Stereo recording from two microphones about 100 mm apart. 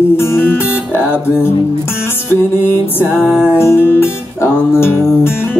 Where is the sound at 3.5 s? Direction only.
25° left (ahead or behind).